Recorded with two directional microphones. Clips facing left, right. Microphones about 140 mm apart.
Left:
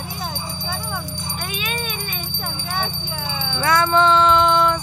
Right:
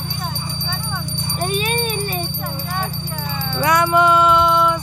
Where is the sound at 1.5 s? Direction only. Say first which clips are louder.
Right 8 dB; 35° right (ahead or behind).